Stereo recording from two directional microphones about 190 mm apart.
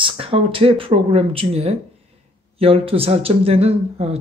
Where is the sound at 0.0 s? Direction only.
30° right (ahead or behind).